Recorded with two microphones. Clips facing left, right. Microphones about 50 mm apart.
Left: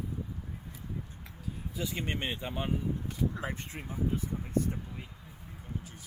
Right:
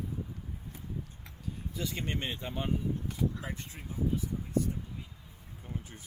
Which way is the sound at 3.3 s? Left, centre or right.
Left.